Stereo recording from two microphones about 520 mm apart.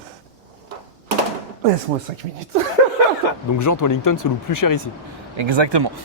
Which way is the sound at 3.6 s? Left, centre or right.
Left.